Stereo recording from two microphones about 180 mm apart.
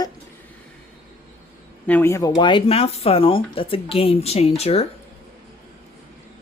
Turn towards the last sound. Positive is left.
turn(degrees=35)  # may be behind; listen again after turning